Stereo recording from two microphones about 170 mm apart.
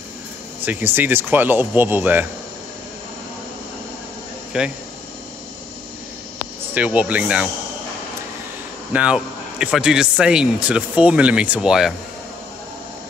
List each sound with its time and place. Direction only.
0.7 s speech: 10° right (ahead or behind)
4.5 s speech: 5° right (ahead or behind)
6.7 s speech: 10° right (ahead or behind)
8.9 s a man's voice: 5° right (ahead or behind)